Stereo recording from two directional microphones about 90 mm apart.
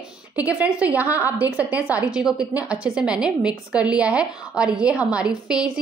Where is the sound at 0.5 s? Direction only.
15° right (ahead or behind).